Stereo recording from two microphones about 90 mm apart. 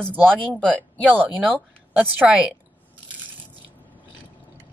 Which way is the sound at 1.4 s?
20° right (ahead or behind).